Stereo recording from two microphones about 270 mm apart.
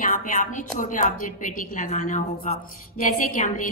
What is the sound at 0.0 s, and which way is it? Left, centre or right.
A woman's voice, left.